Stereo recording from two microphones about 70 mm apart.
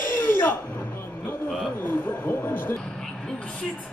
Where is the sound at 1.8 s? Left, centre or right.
Left.